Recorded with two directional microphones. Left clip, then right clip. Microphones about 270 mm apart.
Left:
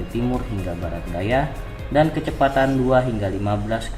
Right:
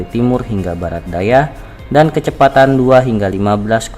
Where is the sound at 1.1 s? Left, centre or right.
Right.